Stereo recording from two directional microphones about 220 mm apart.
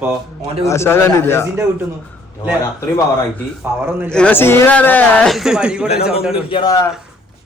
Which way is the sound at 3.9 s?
10° right (ahead or behind).